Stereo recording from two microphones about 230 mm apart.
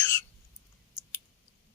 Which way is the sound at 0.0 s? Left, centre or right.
Centre.